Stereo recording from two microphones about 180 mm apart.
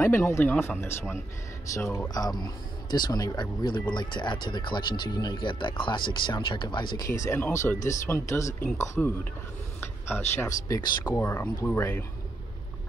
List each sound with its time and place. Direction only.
0.0 s speech: 15° left (ahead or behind)
7.2 s speech: 10° left (ahead or behind)